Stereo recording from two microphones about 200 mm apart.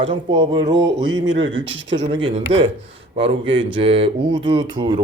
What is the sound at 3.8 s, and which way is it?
Speech, 30° right (ahead or behind).